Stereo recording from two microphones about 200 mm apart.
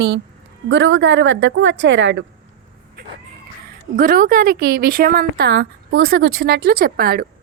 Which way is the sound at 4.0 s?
45° right (ahead or behind).